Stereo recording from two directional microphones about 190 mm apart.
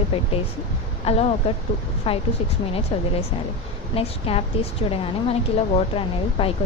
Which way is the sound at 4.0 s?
30° left (ahead or behind).